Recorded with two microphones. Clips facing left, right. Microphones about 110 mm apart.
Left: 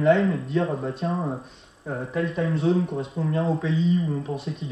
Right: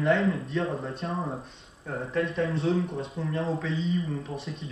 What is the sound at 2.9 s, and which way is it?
Speech, 30° left (ahead or behind).